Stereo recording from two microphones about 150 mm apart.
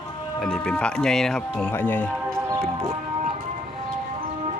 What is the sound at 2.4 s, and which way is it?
Music, 20° right (ahead or behind).